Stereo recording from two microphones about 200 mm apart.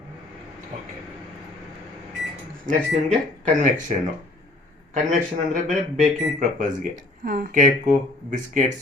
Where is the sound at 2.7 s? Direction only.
40° right (ahead or behind).